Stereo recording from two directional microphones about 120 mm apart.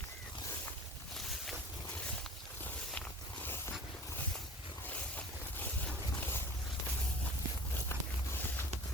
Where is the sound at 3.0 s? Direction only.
15° left (ahead or behind).